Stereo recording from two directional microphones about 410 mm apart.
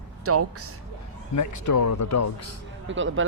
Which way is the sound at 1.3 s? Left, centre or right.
Left.